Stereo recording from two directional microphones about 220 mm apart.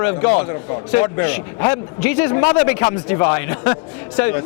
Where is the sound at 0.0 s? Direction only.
20° left (ahead or behind).